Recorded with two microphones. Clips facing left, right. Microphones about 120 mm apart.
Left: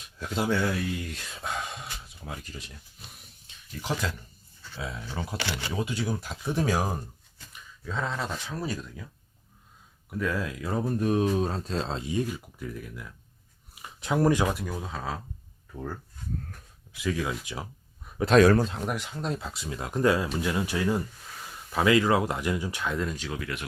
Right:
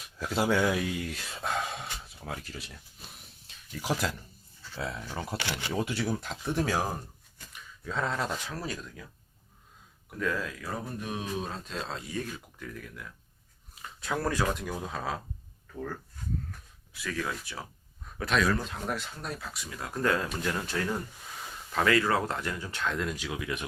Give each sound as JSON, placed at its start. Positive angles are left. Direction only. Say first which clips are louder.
{"t": 0.2, "sound": "speech", "louder": "right 1 dB", "side_deg": -5}
{"t": 7.5, "sound": "speech", "louder": "even", "side_deg": 0}
{"t": 10.2, "sound": "speech", "louder": "left 2 dB", "side_deg": 10}
{"t": 11.0, "sound": "speech", "louder": "left 12 dB", "side_deg": 45}
{"t": 12.3, "sound": "speech", "louder": "left 5 dB", "side_deg": 10}
{"t": 14.5, "sound": "speech", "louder": "even", "side_deg": 0}
{"t": 16.9, "sound": "speech", "louder": "left 5 dB", "side_deg": 15}
{"t": 18.3, "sound": "speech", "louder": "left 9 dB", "side_deg": 45}
{"t": 18.9, "sound": "speech", "louder": "left 4 dB", "side_deg": 15}
{"t": 23.1, "sound": "speech", "louder": "even", "side_deg": -10}